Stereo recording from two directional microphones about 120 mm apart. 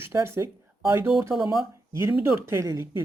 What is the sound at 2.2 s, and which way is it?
Speech, 20° right (ahead or behind).